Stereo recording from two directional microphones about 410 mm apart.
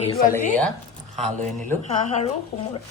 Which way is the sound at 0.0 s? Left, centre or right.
Centre.